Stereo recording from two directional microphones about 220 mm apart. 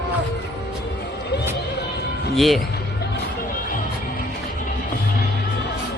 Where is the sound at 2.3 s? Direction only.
Centre (ahead or behind).